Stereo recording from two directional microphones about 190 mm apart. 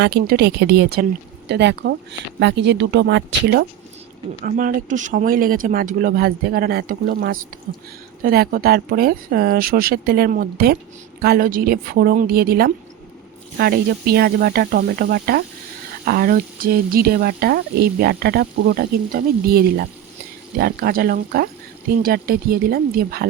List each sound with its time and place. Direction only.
0.0 s a woman's voice: 55° right (ahead or behind)
4.4 s speech: 45° right (ahead or behind)